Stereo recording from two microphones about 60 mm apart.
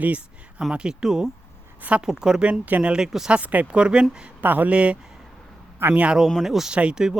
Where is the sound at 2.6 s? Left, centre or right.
Right.